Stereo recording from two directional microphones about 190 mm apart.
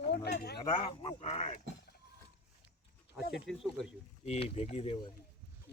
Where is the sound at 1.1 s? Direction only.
35° left (ahead or behind).